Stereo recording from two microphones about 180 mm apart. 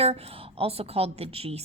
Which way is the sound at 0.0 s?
35° right (ahead or behind).